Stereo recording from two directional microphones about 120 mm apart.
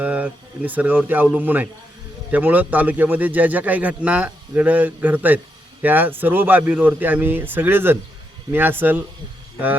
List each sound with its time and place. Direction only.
0.0 s a man's voice: 15° right (ahead or behind)